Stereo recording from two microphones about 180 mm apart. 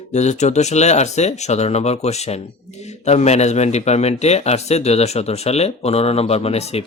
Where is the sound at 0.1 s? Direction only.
40° left (ahead or behind).